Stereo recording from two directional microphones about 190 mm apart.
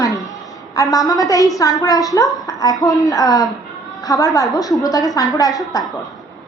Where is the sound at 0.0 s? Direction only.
15° left (ahead or behind).